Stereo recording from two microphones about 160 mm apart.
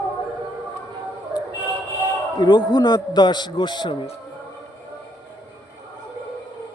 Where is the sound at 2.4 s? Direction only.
25° left (ahead or behind).